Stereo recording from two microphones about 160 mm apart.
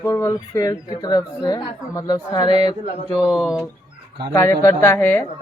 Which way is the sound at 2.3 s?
35° left (ahead or behind).